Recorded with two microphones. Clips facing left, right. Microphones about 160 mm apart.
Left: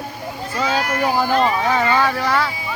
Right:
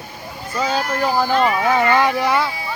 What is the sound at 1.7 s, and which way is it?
Speech, 15° right (ahead or behind).